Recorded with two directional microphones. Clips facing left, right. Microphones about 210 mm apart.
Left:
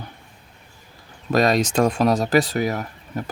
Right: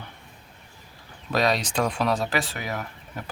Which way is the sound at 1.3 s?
45° left (ahead or behind).